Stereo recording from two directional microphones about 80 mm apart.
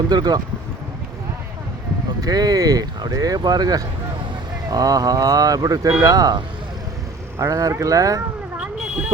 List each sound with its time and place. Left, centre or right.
0.1 s speech: right
2.2 s speech: right
8.6 s a sound: centre